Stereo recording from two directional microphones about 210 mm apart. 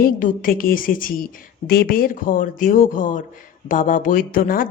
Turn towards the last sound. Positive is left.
turn(degrees=40)  # may be behind; listen again after turning